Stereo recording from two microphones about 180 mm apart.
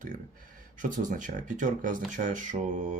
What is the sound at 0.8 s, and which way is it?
Speech, 45° right (ahead or behind).